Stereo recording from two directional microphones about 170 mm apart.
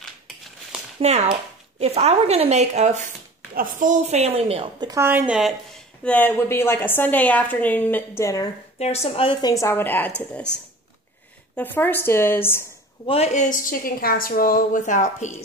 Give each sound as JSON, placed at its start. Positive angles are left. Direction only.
{"t": 1.0, "sound": "speech", "side_deg": -40}
{"t": 6.0, "sound": "a woman's voice", "side_deg": 10}
{"t": 8.7, "sound": "a woman's voice", "side_deg": 40}
{"t": 11.5, "sound": "a woman's voice", "side_deg": 10}
{"t": 13.0, "sound": "a woman's voice", "side_deg": 35}